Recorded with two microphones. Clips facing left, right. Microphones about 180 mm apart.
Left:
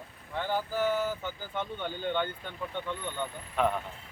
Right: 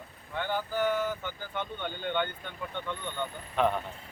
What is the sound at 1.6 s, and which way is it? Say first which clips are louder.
Speech: left 1 dB; 5° left (ahead or behind).